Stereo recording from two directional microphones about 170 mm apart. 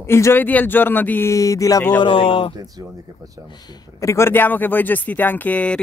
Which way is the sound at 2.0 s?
30° left (ahead or behind).